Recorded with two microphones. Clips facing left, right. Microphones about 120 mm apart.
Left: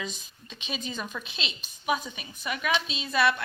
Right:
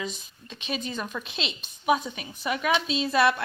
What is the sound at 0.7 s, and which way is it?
Speech, 55° right (ahead or behind).